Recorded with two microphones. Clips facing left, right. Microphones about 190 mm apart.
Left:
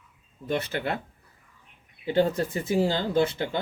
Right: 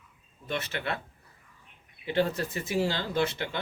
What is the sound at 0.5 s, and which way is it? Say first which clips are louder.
Speech: left 4 dB; 30° left (ahead or behind).